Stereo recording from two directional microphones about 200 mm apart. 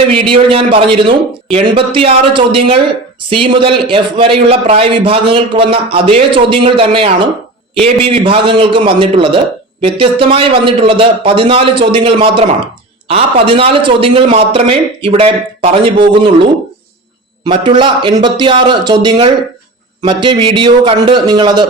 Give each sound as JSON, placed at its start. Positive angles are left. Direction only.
{"t": 0.1, "sound": "a man's voice", "side_deg": -25}